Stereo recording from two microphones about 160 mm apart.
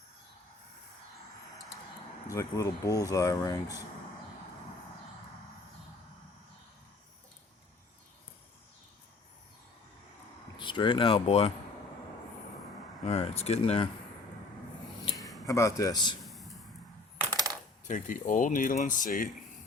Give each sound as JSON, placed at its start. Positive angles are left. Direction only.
{"t": 2.2, "sound": "speech", "side_deg": 20}
{"t": 10.6, "sound": "speech", "side_deg": 30}
{"t": 13.1, "sound": "speech", "side_deg": 40}
{"t": 15.4, "sound": "speech", "side_deg": 20}
{"t": 16.2, "sound": "a sound", "side_deg": 0}
{"t": 17.3, "sound": "coin", "side_deg": -20}
{"t": 17.8, "sound": "speech", "side_deg": 55}